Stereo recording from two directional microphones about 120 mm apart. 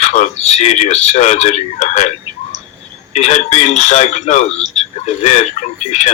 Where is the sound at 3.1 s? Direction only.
70° left (ahead or behind).